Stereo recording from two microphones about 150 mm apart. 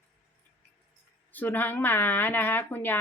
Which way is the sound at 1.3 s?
10° left (ahead or behind).